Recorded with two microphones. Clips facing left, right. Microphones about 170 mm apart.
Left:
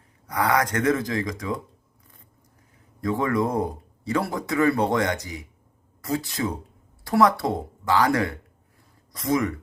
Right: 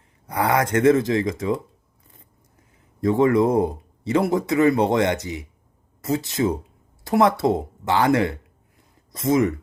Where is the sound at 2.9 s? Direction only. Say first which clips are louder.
Right 6 dB; 25° right (ahead or behind).